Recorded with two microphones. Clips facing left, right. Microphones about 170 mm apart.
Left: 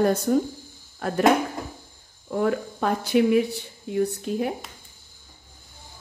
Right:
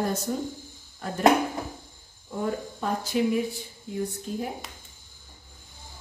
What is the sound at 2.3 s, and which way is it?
Speech, 75° left (ahead or behind).